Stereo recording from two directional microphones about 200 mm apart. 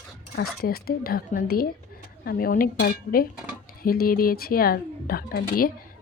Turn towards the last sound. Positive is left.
turn(degrees=45)  # may be behind; listen again after turning